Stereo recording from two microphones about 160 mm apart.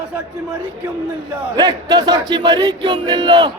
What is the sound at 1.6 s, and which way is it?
Speech, 25° right (ahead or behind).